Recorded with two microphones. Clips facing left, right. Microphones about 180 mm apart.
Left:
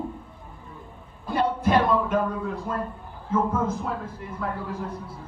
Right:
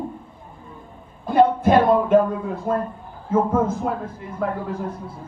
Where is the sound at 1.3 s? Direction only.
50° right (ahead or behind).